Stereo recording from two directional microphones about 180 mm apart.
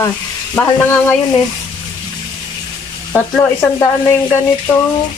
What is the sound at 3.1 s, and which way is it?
Stir, 15° left (ahead or behind).